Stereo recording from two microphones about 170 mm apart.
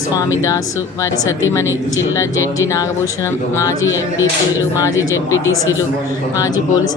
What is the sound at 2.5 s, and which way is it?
A woman's voice, 20° left (ahead or behind).